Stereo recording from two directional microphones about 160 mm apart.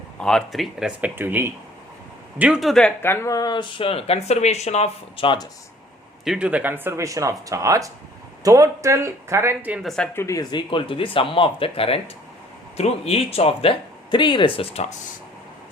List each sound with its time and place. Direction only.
0.2 s a man's voice: 5° left (ahead or behind)
3.0 s speech: 15° left (ahead or behind); by 5.5 s 30° left (ahead or behind)
6.2 s speech: 5° right (ahead or behind)
9.8 s a man's voice: 5° left (ahead or behind)
10.2 s speech: 20° left (ahead or behind)
10.7 s speech: 35° left (ahead or behind)